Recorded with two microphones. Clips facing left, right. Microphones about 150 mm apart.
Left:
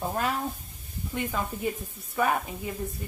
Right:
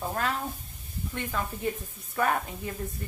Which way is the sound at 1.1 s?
15° left (ahead or behind).